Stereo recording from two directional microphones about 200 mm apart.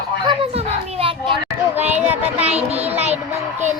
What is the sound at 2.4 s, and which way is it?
Child singing, 30° right (ahead or behind).